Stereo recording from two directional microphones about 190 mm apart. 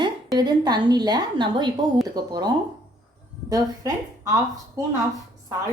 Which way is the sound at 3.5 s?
20° right (ahead or behind).